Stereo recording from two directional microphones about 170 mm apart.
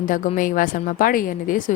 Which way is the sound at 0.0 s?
50° left (ahead or behind).